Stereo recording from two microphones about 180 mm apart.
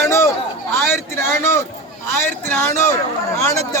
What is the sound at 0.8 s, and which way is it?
Speech, 15° left (ahead or behind).